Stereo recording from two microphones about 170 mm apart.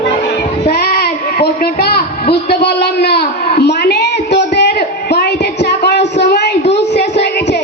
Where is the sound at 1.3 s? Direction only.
65° left (ahead or behind).